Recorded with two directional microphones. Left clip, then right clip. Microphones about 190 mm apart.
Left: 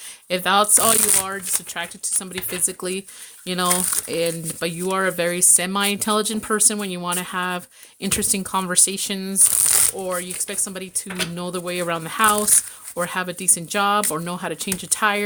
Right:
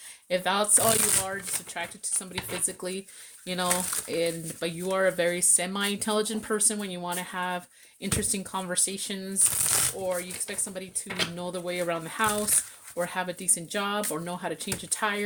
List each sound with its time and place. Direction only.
0.3 s speech: 35° left (ahead or behind)